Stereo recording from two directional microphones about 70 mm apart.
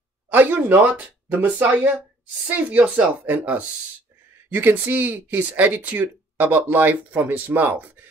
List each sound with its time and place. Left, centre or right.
0.3 s speech: right